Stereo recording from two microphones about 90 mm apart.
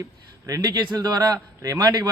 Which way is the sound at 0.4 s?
40° right (ahead or behind).